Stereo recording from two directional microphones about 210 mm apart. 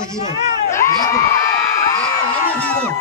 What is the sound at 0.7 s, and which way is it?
Crowd, 15° left (ahead or behind).